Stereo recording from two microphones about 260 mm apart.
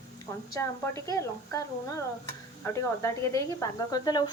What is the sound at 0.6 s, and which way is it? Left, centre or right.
Speech, centre.